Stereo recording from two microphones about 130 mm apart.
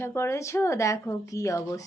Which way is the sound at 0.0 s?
20° left (ahead or behind).